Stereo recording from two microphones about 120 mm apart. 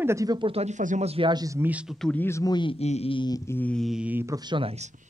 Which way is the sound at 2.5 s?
40° left (ahead or behind).